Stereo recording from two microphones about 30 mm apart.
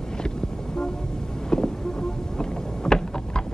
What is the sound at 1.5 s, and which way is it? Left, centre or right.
Vehicle, left.